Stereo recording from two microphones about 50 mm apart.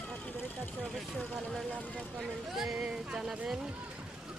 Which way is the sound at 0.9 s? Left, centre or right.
Centre.